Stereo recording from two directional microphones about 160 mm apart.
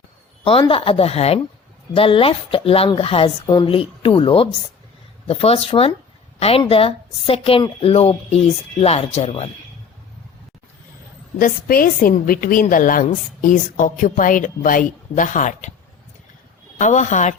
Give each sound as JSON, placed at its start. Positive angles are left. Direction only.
{"t": 0.7, "sound": "a woman's voice", "side_deg": 35}
{"t": 11.3, "sound": "a woman's voice", "side_deg": 60}
{"t": 16.7, "sound": "a woman's voice", "side_deg": 50}